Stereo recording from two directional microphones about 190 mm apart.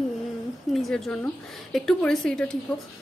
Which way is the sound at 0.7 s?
Centre (ahead or behind).